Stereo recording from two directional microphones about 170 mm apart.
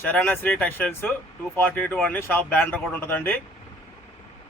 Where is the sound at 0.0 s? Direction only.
10° left (ahead or behind).